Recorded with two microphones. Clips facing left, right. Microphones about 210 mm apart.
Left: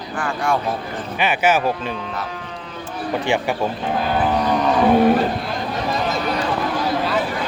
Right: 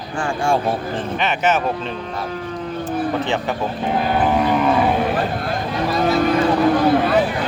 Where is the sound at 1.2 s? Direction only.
10° left (ahead or behind).